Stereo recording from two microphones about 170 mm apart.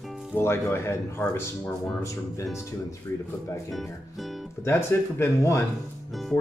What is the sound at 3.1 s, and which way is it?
Speech, 20° left (ahead or behind).